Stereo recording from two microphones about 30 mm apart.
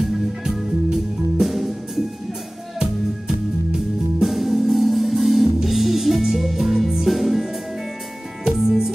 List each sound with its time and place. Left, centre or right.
0.5 s music: centre
4.2 s music: centre
8.5 s music: centre